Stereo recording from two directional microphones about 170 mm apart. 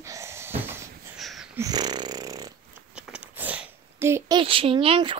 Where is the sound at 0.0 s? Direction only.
15° right (ahead or behind).